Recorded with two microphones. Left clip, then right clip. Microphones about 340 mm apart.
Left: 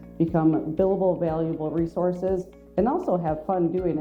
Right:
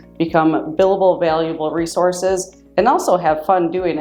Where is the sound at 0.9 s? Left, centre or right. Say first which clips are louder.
Right 10 dB; right.